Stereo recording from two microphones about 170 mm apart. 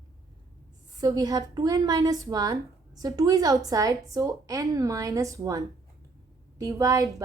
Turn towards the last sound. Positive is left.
turn(degrees=-20)  # may be behind; listen again after turning